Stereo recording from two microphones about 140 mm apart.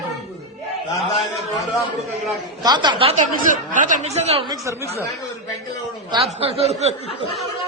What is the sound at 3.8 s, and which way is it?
Speech, 60° right (ahead or behind).